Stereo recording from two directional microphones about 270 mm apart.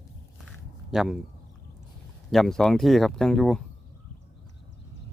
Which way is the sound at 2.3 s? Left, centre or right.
Centre.